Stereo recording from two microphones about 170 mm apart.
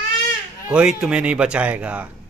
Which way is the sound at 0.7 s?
5° right (ahead or behind).